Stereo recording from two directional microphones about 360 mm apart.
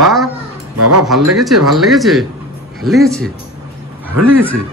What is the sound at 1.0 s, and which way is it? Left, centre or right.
Speech, centre.